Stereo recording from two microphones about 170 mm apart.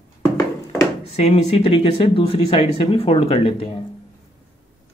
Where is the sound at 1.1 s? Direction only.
40° left (ahead or behind).